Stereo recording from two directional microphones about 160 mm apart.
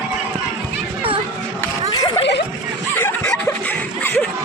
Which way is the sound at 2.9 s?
10° left (ahead or behind).